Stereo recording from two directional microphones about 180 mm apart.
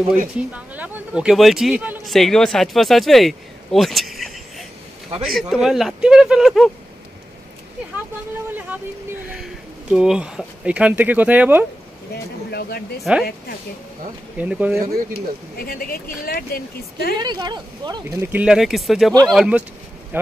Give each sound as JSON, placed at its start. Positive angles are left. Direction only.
{"t": 0.5, "sound": "a man's voice", "side_deg": -10}
{"t": 9.3, "sound": "speech", "side_deg": -5}
{"t": 12.4, "sound": "a sound", "side_deg": 60}
{"t": 13.1, "sound": "a man's voice", "side_deg": -5}
{"t": 14.4, "sound": "speech", "side_deg": -5}
{"t": 15.6, "sound": "speech", "side_deg": 55}
{"t": 17.2, "sound": "speech", "side_deg": -25}
{"t": 18.3, "sound": "a man's voice", "side_deg": -5}